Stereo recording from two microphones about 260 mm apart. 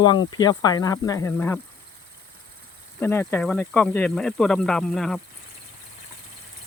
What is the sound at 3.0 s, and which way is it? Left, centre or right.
Speech, centre.